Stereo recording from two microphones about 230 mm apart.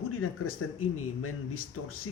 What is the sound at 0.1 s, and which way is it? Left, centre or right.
Speech, left.